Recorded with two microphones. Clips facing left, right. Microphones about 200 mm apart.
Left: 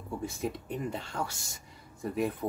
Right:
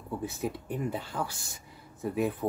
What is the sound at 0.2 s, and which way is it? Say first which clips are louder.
Speech: left 1 dB; 5° right (ahead or behind).